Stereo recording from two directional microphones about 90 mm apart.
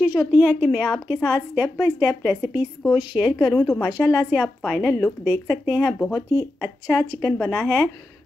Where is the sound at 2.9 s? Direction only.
10° right (ahead or behind).